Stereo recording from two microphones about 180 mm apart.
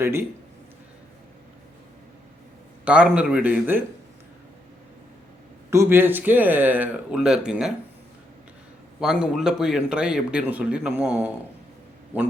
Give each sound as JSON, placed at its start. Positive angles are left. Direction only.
{"t": 0.0, "sound": "speech", "side_deg": -15}
{"t": 2.8, "sound": "speech", "side_deg": -5}
{"t": 5.7, "sound": "speech", "side_deg": -15}
{"t": 9.0, "sound": "a man's voice", "side_deg": -5}